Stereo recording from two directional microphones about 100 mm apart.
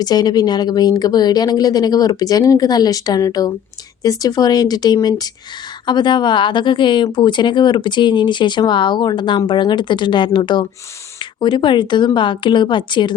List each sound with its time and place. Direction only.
0.0 s a woman's voice: 40° left (ahead or behind)